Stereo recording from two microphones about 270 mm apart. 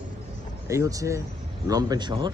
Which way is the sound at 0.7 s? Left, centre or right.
Centre.